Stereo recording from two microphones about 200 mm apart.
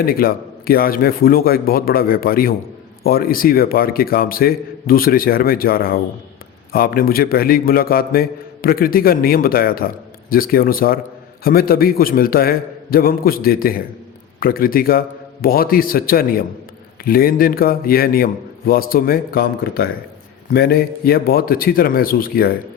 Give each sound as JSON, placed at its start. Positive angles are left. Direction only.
{"t": 0.0, "sound": "a man's voice", "side_deg": 45}